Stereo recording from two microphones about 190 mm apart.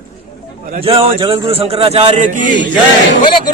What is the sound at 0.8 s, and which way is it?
Speech, 30° right (ahead or behind).